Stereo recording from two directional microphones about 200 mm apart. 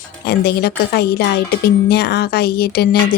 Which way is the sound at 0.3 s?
55° left (ahead or behind).